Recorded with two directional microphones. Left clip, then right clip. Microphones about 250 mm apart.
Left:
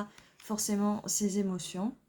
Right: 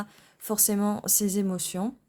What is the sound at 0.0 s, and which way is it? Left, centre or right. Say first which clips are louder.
Speech: right 3 dB; right.